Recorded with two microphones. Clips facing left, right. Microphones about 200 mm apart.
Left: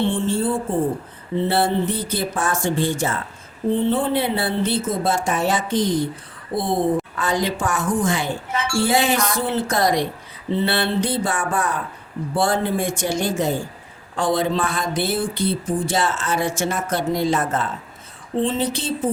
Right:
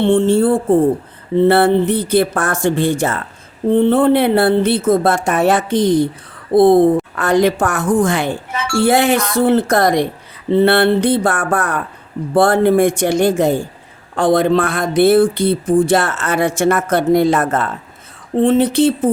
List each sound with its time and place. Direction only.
0.0 s speech: 65° right (ahead or behind)